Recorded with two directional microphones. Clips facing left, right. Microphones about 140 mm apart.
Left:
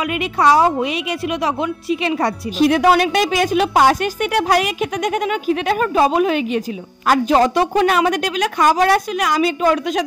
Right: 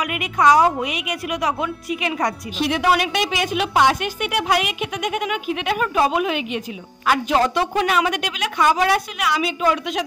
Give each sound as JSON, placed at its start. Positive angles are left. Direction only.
{"t": 0.0, "sound": "a woman's voice", "side_deg": 30}
{"t": 2.6, "sound": "a woman's voice", "side_deg": 45}